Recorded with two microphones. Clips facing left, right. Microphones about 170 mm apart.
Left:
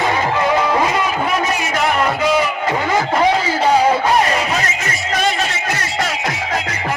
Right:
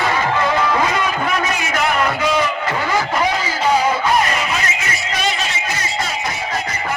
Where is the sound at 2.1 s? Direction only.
5° left (ahead or behind).